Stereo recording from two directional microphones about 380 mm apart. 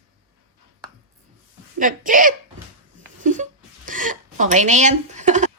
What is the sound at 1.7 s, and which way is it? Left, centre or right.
Speech, right.